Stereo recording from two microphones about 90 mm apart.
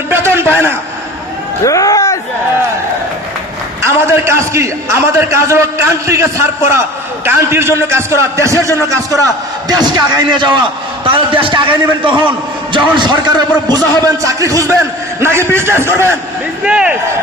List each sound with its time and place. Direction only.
0.1 s a sound: 25° right (ahead or behind)
1.6 s speech: 40° left (ahead or behind)
4.0 s a man's voice: 30° right (ahead or behind)
9.7 s a man's voice: 55° right (ahead or behind)
11.1 s a man's voice: 75° right (ahead or behind)
13.0 s a man's voice: 55° right (ahead or behind)
14.2 s a man's voice: 35° right (ahead or behind)
16.6 s speech: 10° right (ahead or behind)